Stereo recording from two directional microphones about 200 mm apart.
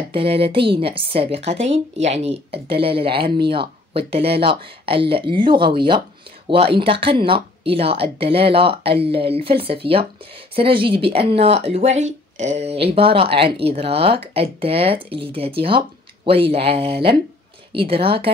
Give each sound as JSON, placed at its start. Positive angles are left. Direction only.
{"t": 0.1, "sound": "speech", "side_deg": -30}